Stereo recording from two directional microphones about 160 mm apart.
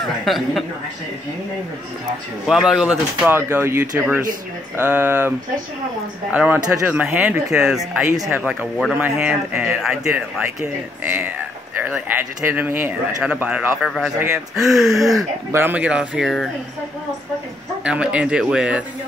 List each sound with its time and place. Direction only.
0.0 s speech: centre (ahead or behind)
2.4 s speech: 5° right (ahead or behind)
6.3 s speech: 10° right (ahead or behind)
8.1 s speech: 20° right (ahead or behind)
8.4 s speech: 5° right (ahead or behind)
15.0 s speech: 20° right (ahead or behind); by 16.4 s 5° right (ahead or behind)
17.8 s speech: 5° right (ahead or behind)